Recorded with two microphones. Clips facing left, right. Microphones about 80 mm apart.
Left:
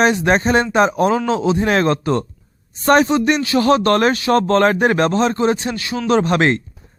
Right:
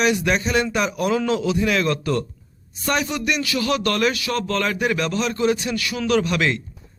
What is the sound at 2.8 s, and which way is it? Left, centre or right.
Speech, left.